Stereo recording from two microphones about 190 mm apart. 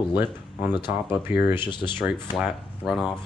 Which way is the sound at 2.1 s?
Centre (ahead or behind).